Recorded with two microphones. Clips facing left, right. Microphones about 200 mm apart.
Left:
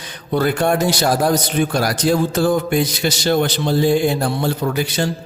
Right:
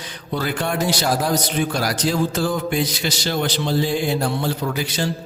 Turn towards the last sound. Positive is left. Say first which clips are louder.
# left 4 dB
turn(degrees=50)  # may be behind; listen again after turning